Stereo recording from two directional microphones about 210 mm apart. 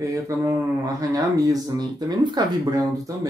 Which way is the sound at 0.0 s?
15° right (ahead or behind).